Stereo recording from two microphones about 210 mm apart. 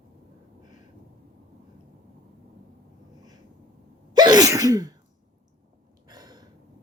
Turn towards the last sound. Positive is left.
turn(degrees=-20)  # may be behind; listen again after turning